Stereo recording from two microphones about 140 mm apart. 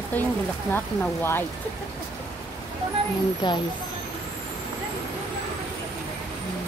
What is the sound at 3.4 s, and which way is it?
Speech, 30° left (ahead or behind).